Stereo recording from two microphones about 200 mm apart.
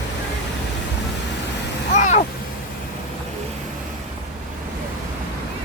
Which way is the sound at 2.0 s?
40° left (ahead or behind).